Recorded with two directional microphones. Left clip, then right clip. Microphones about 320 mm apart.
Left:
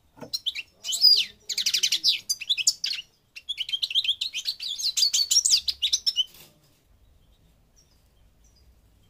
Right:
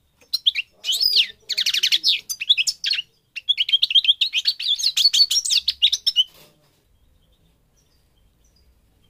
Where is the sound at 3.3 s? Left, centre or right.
Centre.